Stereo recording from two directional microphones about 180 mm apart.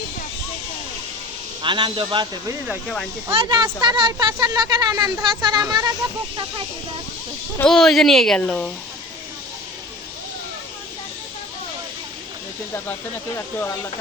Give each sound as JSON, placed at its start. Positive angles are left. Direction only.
{"t": 1.6, "sound": "speech", "side_deg": -25}
{"t": 7.6, "sound": "speech", "side_deg": 0}
{"t": 12.7, "sound": "speech", "side_deg": 15}